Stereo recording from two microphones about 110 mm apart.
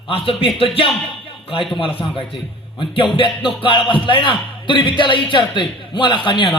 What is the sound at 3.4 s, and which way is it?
A man's voice, 50° left (ahead or behind).